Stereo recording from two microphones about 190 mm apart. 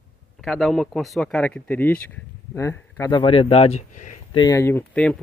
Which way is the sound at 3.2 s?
30° left (ahead or behind).